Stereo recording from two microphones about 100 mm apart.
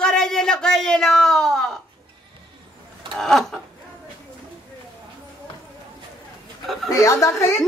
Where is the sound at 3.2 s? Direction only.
5° left (ahead or behind).